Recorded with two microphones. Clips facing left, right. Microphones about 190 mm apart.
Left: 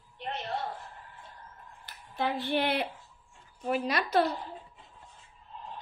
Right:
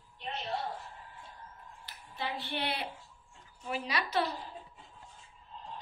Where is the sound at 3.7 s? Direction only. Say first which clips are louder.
Left 6 dB; 50° left (ahead or behind).